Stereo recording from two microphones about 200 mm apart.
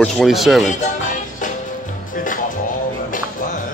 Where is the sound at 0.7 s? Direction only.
40° left (ahead or behind).